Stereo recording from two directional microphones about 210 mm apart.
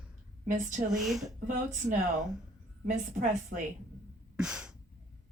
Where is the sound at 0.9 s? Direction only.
Centre (ahead or behind).